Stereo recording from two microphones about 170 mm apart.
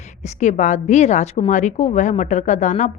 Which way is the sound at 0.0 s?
45° left (ahead or behind).